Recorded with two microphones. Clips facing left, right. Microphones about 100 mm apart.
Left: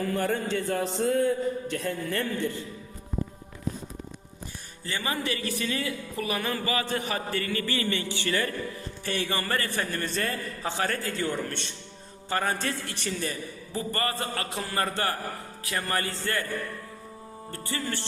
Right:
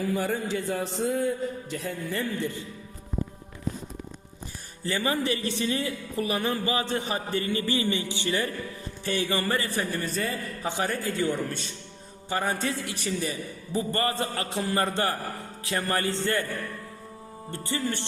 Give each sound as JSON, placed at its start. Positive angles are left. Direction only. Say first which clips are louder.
{"t": 0.0, "sound": "speech", "louder": "even", "side_deg": -5}
{"t": 2.4, "sound": "music", "louder": "left 1 dB", "side_deg": -20}
{"t": 5.0, "sound": "music", "louder": "right 2 dB", "side_deg": -30}
{"t": 9.3, "sound": "a man's voice", "louder": "right 2 dB", "side_deg": -20}
{"t": 10.7, "sound": "a man's voice", "louder": "right 1 dB", "side_deg": -20}
{"t": 13.7, "sound": "music", "louder": "right 3 dB", "side_deg": -25}
{"t": 17.5, "sound": "music", "louder": "right 3 dB", "side_deg": -20}